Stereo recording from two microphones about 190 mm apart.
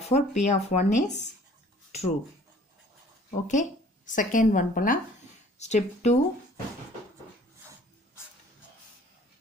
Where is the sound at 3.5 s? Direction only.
40° left (ahead or behind).